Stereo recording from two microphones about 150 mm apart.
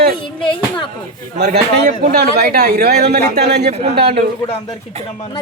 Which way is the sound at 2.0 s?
90° right.